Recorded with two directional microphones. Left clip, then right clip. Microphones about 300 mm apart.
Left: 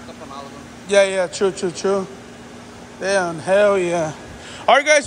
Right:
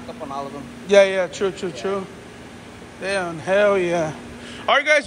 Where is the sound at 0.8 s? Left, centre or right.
Centre.